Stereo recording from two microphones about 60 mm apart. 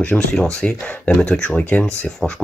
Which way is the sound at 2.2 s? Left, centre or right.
Centre.